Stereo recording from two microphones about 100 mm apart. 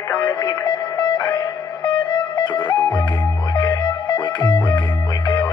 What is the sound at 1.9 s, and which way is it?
Music, 55° left (ahead or behind).